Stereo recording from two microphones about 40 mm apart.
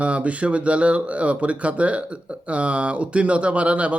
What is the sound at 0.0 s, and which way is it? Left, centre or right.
Speech, right.